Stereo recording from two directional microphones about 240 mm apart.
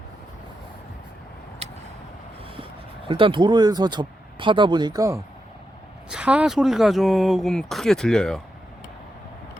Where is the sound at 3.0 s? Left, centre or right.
Right; by 8.4 s centre.